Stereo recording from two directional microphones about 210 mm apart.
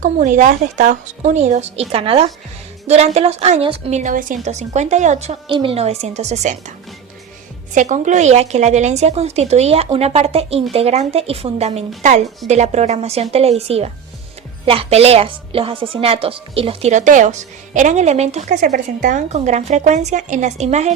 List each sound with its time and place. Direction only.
0.0 s a woman's voice: 35° right (ahead or behind)